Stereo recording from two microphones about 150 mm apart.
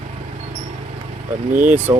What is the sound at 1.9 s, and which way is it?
Speech, 20° right (ahead or behind).